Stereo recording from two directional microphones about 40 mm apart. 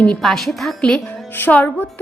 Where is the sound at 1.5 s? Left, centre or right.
Left.